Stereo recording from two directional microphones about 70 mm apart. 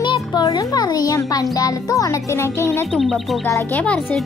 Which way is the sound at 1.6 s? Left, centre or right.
Left.